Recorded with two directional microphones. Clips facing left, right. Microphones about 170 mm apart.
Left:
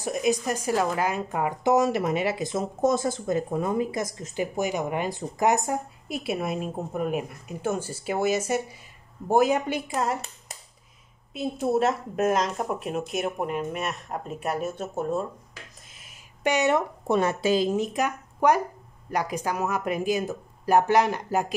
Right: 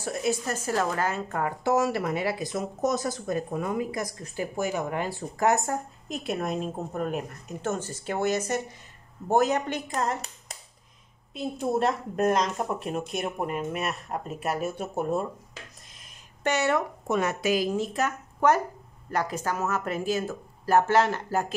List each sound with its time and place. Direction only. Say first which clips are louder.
0.0 s speech: left 3 dB; 15° left (ahead or behind); by 15.2 s 10° right (ahead or behind)
15.9 s a sound: left 1 dB; 5° left (ahead or behind)
17.1 s speech: left 3 dB; 30° left (ahead or behind); by 21.5 s 15° left (ahead or behind)